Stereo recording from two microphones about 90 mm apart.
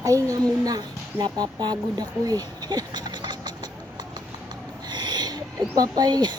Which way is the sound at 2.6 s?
50° right (ahead or behind).